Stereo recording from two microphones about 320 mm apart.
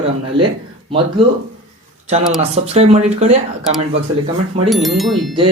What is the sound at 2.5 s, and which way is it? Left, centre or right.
Speech, centre.